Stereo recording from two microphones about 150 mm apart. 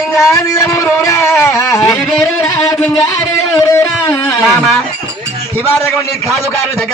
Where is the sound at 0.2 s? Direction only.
20° left (ahead or behind).